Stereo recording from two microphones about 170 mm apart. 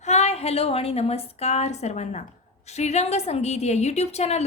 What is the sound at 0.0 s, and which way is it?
A woman's voice, 40° left (ahead or behind).